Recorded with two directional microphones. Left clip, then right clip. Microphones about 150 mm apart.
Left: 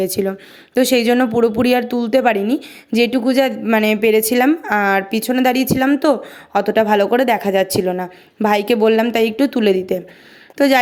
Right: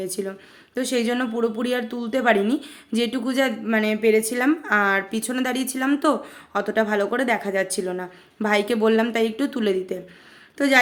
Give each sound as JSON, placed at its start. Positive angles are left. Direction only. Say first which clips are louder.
{"t": 0.0, "sound": "speech", "louder": "left 10 dB", "side_deg": 50}